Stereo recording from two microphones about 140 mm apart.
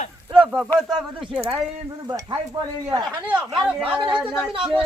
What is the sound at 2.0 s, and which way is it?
Stir, 30° right (ahead or behind).